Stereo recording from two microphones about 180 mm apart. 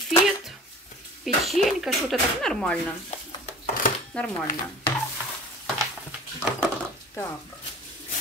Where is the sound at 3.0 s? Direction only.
40° left (ahead or behind).